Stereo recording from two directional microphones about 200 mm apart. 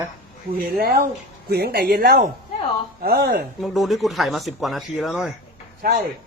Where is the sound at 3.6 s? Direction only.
Centre (ahead or behind).